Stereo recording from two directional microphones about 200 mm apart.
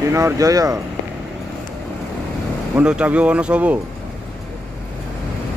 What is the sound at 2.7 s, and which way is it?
Speech, 5° right (ahead or behind).